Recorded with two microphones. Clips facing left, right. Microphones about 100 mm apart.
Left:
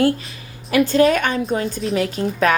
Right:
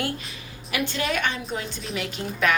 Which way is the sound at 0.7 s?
40° left (ahead or behind).